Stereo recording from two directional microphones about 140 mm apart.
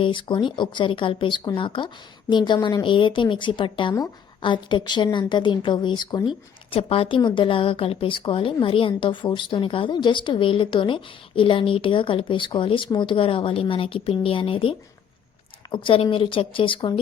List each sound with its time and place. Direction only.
0.0 s a woman's voice: 35° left (ahead or behind)